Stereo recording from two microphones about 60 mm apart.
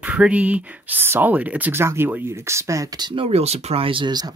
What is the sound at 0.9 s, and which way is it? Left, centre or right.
Speech, right.